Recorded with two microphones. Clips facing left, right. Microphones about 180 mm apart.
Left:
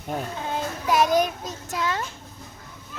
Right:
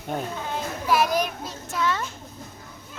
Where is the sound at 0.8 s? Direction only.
20° left (ahead or behind).